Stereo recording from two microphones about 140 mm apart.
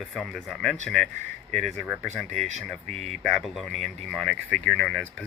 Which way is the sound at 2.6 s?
Centre (ahead or behind).